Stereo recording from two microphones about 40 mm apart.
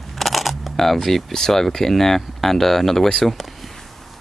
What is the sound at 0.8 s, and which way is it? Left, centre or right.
Speech, centre.